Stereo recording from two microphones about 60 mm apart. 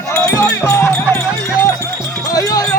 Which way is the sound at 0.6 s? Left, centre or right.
Left.